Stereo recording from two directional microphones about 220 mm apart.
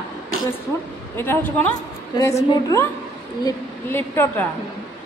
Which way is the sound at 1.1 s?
10° left (ahead or behind).